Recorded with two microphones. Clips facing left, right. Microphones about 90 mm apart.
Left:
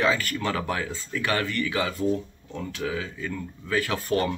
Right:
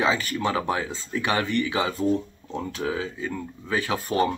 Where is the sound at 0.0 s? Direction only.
20° right (ahead or behind).